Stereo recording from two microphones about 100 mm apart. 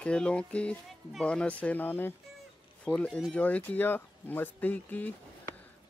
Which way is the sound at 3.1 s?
Centre (ahead or behind).